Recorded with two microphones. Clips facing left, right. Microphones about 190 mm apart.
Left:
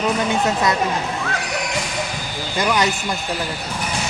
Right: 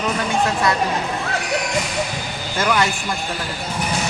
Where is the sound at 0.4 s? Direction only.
20° left (ahead or behind).